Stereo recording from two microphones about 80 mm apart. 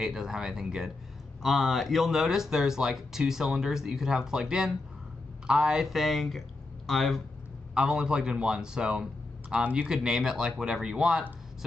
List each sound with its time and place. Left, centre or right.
0.0 s speech: centre
7.7 s speech: centre
9.8 s speech: centre